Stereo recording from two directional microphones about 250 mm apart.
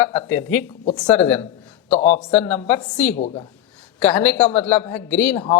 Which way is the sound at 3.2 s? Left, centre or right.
Left.